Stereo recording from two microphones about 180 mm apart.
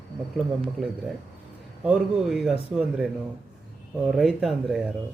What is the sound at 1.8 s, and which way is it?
Speech, 5° right (ahead or behind).